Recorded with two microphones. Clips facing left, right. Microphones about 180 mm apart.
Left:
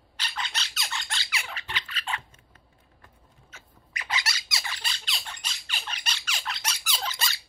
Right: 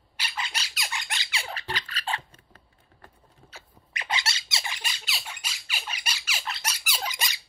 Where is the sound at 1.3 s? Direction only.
35° right (ahead or behind).